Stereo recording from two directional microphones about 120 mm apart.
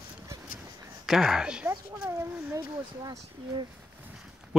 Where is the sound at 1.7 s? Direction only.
20° right (ahead or behind).